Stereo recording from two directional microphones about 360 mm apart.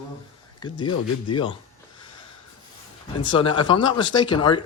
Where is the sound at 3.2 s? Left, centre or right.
Centre.